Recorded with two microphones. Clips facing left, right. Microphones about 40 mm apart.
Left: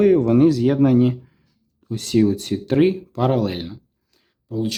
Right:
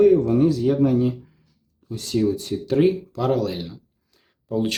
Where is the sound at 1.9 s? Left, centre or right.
Left.